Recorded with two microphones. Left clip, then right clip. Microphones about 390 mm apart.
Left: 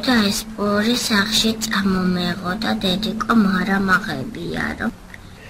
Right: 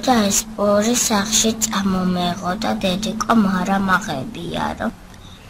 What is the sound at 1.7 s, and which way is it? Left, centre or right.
A woman's voice, centre.